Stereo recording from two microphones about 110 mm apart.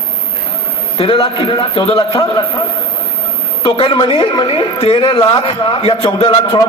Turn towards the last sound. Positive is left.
turn(degrees=50)  # may be behind; listen again after turning